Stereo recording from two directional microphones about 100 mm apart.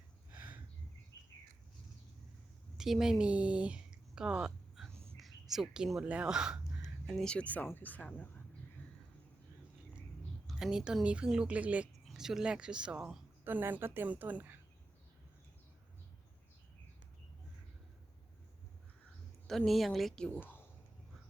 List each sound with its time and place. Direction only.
0.3 s a sound: 15° right (ahead or behind)
1.1 s bird: 25° left (ahead or behind)
2.7 s speech: 5° right (ahead or behind)
7.3 s speech: 15° left (ahead or behind)
10.5 s speech: 5° right (ahead or behind)
13.4 s a woman's voice: 20° right (ahead or behind)
19.5 s speech: centre (ahead or behind)